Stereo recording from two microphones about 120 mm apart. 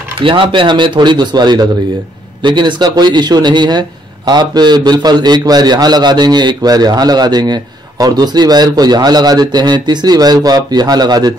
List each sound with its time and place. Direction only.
0.2 s a man's voice: 45° right (ahead or behind)